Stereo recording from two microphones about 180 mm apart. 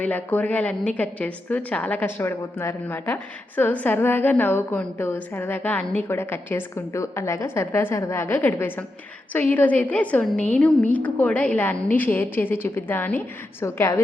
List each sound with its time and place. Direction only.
0.0 s a woman's voice: 10° left (ahead or behind)